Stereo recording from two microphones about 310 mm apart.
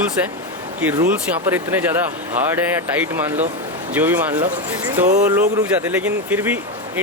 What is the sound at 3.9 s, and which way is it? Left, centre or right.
Speech, centre.